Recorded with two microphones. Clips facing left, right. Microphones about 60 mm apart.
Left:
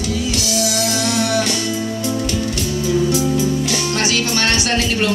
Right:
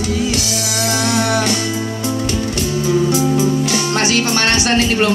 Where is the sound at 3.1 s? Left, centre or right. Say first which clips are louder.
Right 2 dB; right.